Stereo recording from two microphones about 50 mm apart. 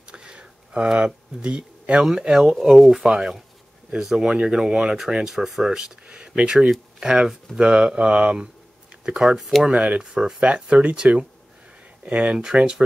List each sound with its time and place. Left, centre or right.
0.1 s a sound: centre
2.2 s speech: centre
9.4 s speech: centre
9.7 s speech: right